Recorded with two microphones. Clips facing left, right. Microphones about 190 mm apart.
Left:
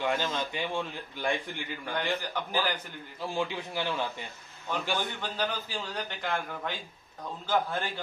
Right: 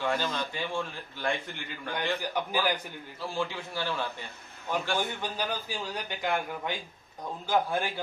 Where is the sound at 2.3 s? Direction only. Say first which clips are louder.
Right 2 dB; 10° right (ahead or behind).